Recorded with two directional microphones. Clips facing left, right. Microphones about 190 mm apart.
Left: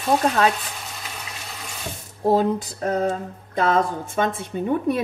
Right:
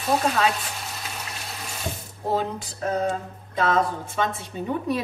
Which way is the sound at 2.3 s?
40° left (ahead or behind).